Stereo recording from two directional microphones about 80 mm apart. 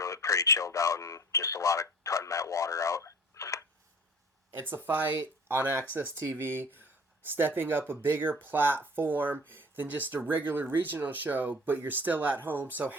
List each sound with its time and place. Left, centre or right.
0.0 s speech: left
4.7 s speech: right